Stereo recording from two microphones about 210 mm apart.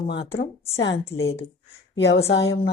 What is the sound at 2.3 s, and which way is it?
Speech, 60° left (ahead or behind).